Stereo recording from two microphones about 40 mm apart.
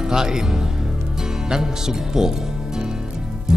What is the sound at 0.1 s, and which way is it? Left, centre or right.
Speech, centre.